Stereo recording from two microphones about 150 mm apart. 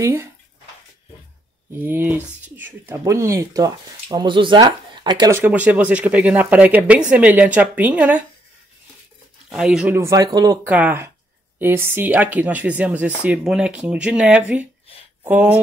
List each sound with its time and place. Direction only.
0.0 s speech: 20° right (ahead or behind)
1.8 s speech: 15° right (ahead or behind); by 5.3 s 30° right (ahead or behind)
5.3 s speech: 10° right (ahead or behind)
9.5 s speech: 5° right (ahead or behind)
9.9 s speech: 20° right (ahead or behind)
10.6 s speech: 10° right (ahead or behind)